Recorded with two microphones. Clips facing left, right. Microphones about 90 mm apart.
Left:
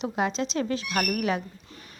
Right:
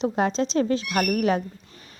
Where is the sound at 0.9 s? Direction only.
15° right (ahead or behind).